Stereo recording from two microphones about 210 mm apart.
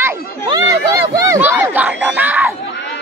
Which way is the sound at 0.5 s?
20° right (ahead or behind).